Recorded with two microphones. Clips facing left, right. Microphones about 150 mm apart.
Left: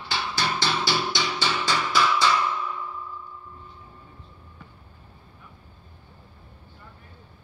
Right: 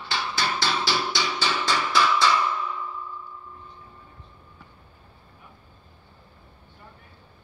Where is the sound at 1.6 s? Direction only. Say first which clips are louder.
Right 1 dB; 5° left (ahead or behind).